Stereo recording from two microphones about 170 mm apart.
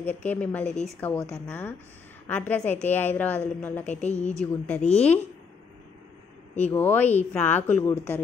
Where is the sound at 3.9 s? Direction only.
40° left (ahead or behind).